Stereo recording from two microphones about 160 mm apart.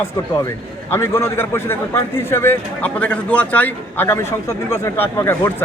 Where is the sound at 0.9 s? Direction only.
15° left (ahead or behind).